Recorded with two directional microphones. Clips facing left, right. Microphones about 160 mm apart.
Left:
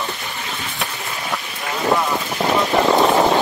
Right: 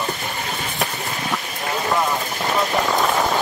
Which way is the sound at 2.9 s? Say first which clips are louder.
Left 5 dB; 35° left (ahead or behind).